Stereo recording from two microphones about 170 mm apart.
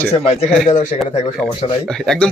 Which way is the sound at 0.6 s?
45° left (ahead or behind).